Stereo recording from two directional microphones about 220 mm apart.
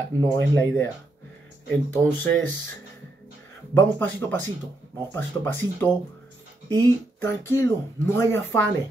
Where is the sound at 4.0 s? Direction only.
10° left (ahead or behind).